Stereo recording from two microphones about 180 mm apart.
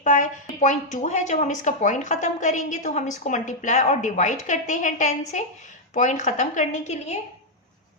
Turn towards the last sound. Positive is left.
turn(degrees=40)  # may be behind; listen again after turning